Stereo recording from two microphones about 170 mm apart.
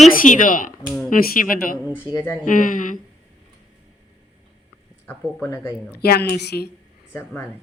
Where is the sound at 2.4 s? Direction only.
50° left (ahead or behind).